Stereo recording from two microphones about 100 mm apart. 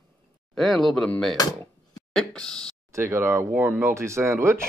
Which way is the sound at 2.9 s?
25° right (ahead or behind).